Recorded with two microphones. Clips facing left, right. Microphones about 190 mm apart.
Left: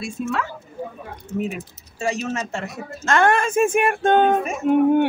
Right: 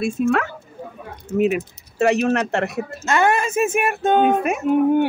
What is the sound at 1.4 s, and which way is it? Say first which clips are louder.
Speech: right 12 dB; 70° right (ahead or behind).